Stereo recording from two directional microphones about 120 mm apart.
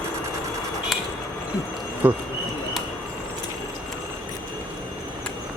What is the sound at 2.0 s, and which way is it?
Speech, 15° right (ahead or behind).